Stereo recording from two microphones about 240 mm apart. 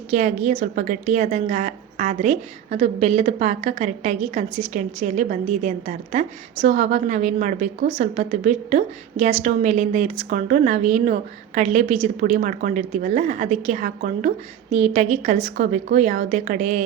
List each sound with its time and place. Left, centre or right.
0.1 s a woman's voice: right